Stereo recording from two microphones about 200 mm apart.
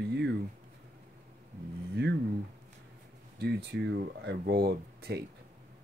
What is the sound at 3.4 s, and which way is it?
Speech, 55° right (ahead or behind).